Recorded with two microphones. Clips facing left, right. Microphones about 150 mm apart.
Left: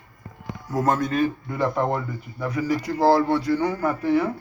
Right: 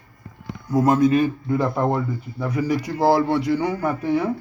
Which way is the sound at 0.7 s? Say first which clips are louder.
Right 6 dB; 10° right (ahead or behind).